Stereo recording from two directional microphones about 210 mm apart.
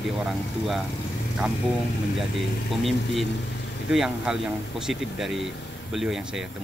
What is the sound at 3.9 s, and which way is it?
Speech, centre (ahead or behind).